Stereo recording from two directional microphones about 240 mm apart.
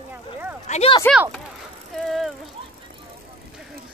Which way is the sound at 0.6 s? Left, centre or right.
Left.